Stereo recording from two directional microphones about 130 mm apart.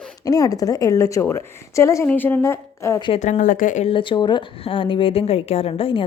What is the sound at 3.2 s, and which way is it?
Speech, 75° left (ahead or behind).